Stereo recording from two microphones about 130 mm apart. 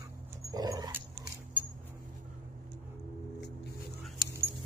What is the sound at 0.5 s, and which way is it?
Dog, 30° right (ahead or behind).